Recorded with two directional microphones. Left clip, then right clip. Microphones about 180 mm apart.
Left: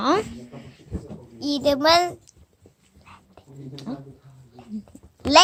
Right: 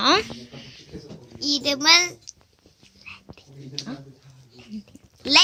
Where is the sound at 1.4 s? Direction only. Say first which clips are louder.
Left 2 dB; 60° left (ahead or behind).